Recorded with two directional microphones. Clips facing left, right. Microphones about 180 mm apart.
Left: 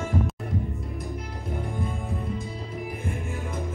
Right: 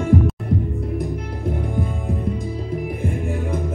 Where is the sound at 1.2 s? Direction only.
60° right (ahead or behind).